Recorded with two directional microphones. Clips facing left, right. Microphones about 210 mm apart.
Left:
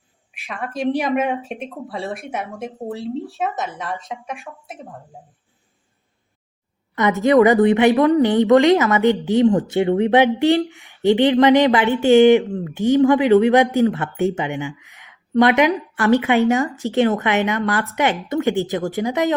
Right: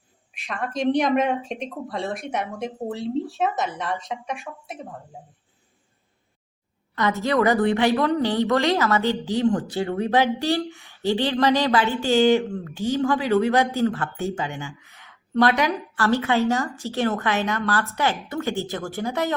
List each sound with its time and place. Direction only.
0.3 s a woman's voice: centre (ahead or behind)
6.9 s a woman's voice: 20° left (ahead or behind)